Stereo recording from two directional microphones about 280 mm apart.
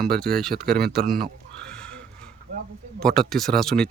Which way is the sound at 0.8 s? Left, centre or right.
Right.